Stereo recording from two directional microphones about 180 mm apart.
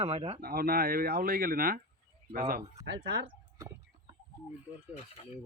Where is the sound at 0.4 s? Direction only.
55° right (ahead or behind).